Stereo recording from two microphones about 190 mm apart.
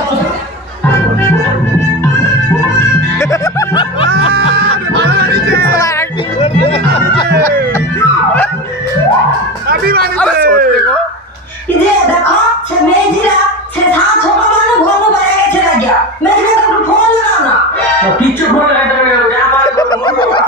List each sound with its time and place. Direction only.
3.2 s music: 15° left (ahead or behind)
4.6 s music: 60° right (ahead or behind)
6.4 s music: 30° left (ahead or behind)
9.7 s music: 55° right (ahead or behind)
10.1 s a sound: 5° left (ahead or behind)
19.8 s snicker: 25° left (ahead or behind)